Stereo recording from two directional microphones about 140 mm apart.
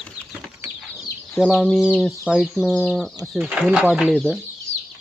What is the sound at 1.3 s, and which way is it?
Speech, 5° left (ahead or behind).